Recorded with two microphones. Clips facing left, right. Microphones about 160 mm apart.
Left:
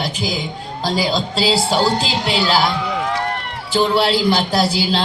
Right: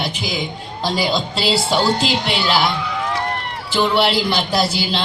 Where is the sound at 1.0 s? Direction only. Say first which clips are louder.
Left 2 dB; 40° left (ahead or behind).